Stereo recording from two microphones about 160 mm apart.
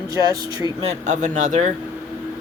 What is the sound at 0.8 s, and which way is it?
Speech, 45° right (ahead or behind).